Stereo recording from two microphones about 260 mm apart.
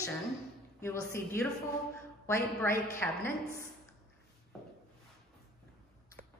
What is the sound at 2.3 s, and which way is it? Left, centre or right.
Speech, centre.